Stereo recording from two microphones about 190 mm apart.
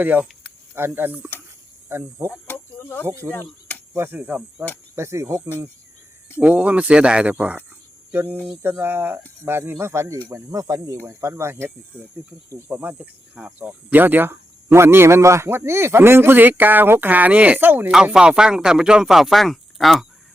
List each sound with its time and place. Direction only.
0.0 s speech: 10° right (ahead or behind)
2.5 s chicken: 10° left (ahead or behind)
3.1 s speech: 15° right (ahead or behind)
6.4 s speech: 5° right (ahead or behind)